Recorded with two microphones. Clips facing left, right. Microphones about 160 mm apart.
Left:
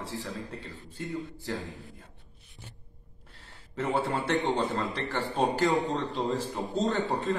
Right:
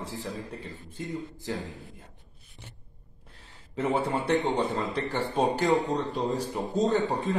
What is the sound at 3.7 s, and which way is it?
A man's voice, 20° right (ahead or behind).